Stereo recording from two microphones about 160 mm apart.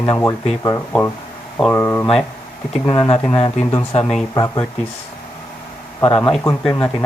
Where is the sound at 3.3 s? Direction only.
40° left (ahead or behind).